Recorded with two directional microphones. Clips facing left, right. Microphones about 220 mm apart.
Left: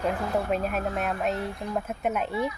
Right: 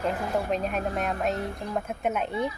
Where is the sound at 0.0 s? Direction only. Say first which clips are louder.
Left 1 dB; centre (ahead or behind).